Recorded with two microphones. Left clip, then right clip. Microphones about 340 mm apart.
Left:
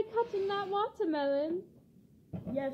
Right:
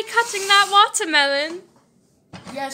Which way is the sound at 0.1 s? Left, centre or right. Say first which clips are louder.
Right 15 dB; centre.